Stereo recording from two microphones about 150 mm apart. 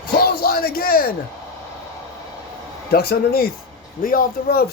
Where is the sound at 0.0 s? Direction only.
90° left.